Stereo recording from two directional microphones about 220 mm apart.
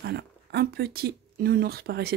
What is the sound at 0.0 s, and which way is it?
Speech, 50° right (ahead or behind).